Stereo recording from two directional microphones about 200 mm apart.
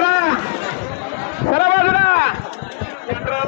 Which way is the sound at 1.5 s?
50° left (ahead or behind).